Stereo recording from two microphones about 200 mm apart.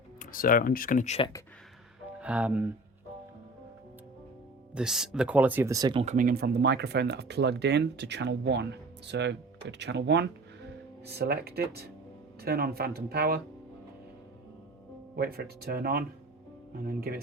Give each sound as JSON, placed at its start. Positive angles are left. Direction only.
{"t": 0.2, "sound": "speech", "side_deg": 45}
{"t": 2.1, "sound": "speech", "side_deg": -5}
{"t": 4.7, "sound": "speech", "side_deg": -5}
{"t": 6.1, "sound": "speech", "side_deg": -45}
{"t": 15.1, "sound": "speech", "side_deg": -50}